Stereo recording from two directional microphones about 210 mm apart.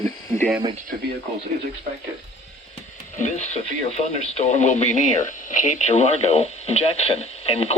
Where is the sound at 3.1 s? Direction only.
35° left (ahead or behind).